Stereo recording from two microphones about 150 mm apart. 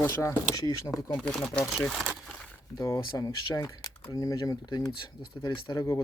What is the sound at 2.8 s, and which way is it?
Speech, 25° left (ahead or behind).